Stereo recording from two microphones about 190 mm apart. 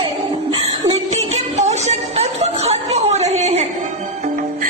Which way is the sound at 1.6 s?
35° right (ahead or behind).